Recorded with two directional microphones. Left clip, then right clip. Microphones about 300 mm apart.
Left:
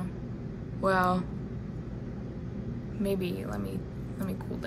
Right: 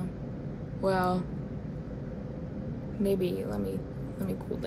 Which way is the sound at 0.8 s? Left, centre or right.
Centre.